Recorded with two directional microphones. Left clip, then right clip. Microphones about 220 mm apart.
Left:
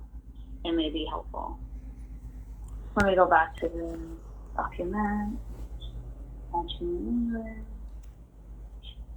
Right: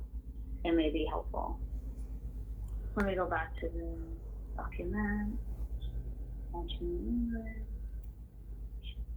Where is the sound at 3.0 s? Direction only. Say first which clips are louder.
Left 14 dB; 15° left (ahead or behind).